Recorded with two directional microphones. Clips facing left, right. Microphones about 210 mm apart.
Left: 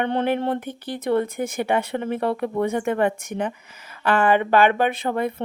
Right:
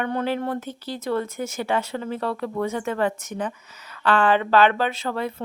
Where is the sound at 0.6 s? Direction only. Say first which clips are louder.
Left 2 dB; 55° left (ahead or behind).